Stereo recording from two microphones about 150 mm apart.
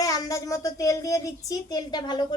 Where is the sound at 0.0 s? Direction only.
25° left (ahead or behind).